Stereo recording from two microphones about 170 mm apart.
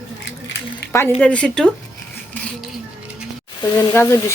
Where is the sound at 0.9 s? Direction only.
15° left (ahead or behind).